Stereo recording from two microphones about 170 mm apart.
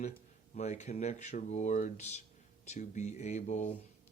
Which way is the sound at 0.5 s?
45° left (ahead or behind).